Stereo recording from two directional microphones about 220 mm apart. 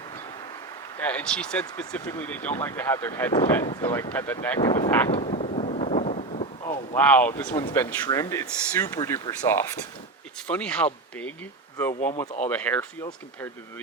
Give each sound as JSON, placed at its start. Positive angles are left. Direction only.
{"t": 0.9, "sound": "speech", "side_deg": 5}
{"t": 5.1, "sound": "a sound", "side_deg": 25}
{"t": 6.9, "sound": "speech", "side_deg": 5}
{"t": 10.4, "sound": "speech", "side_deg": 5}
{"t": 12.5, "sound": "speech", "side_deg": 5}